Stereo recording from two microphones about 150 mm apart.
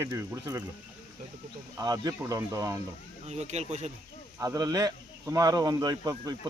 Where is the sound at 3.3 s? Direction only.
50° right (ahead or behind).